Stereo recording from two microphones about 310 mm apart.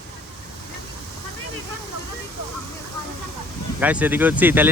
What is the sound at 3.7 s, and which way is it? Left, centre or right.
Speech, centre.